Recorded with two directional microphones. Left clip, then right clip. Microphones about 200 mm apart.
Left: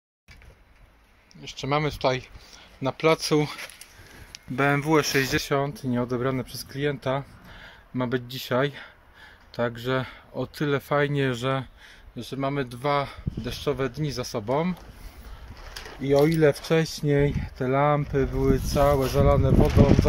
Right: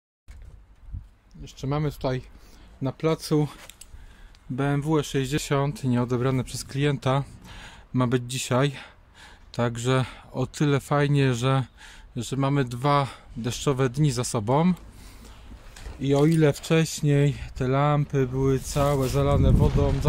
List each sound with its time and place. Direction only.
1.4 s speech: 15° right (ahead or behind)
4.6 s speech: 5° right (ahead or behind); by 14.8 s 40° right (ahead or behind)
16.0 s speech: 10° right (ahead or behind)